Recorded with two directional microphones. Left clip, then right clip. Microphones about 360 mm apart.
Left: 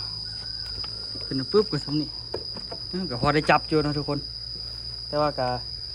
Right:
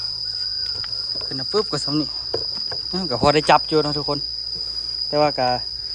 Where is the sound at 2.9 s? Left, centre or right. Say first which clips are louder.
Right 6 dB; centre.